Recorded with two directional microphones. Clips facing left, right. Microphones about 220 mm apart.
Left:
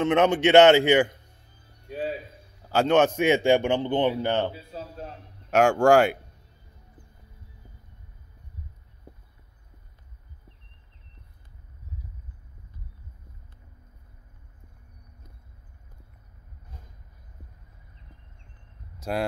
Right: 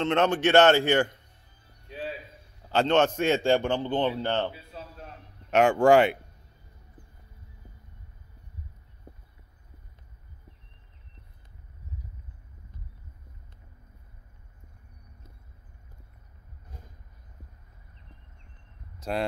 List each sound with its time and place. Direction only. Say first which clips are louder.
0.0 s a man's voice: left 3 dB; 10° left (ahead or behind)
0.3 s speech: left 4 dB; 20° left (ahead or behind)
1.9 s a sound: left 5 dB; 50° left (ahead or behind)
2.7 s a man's voice: left 2 dB; 10° left (ahead or behind)
4.5 s a sound: left 4 dB; 35° left (ahead or behind)
5.5 s speech: left 1 dB; centre (ahead or behind)
18.9 s speech: left 1 dB; 5° left (ahead or behind)